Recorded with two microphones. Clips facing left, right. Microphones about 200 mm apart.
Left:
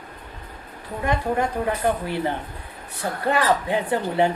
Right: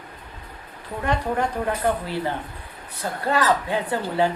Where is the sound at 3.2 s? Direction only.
20° left (ahead or behind).